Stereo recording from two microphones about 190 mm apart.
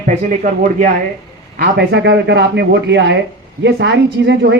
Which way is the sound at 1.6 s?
60° right (ahead or behind).